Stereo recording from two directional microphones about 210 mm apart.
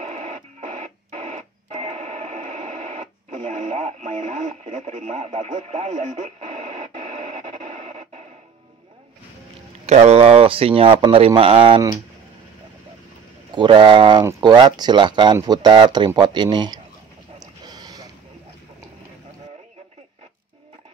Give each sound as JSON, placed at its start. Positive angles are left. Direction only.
{"t": 0.1, "sound": "radio", "side_deg": -35}
{"t": 9.8, "sound": "speech", "side_deg": -30}
{"t": 13.6, "sound": "speech", "side_deg": -20}
{"t": 17.4, "sound": "a sound", "side_deg": -20}